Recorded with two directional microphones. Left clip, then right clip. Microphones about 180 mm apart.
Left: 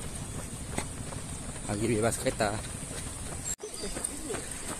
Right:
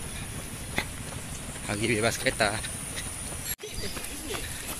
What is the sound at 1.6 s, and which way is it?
Speech, 10° left (ahead or behind).